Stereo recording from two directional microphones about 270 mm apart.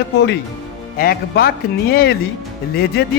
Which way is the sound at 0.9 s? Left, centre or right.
Left.